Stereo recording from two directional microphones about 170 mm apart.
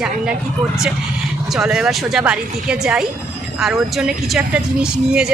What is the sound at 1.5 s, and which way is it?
Speech, 5° right (ahead or behind).